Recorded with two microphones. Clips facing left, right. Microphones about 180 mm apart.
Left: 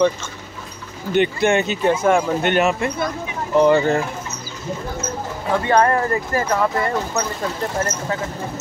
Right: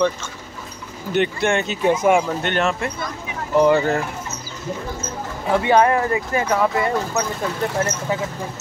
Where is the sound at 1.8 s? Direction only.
15° right (ahead or behind).